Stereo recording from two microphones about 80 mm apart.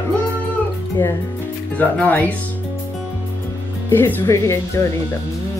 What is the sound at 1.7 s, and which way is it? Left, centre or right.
Speech, left.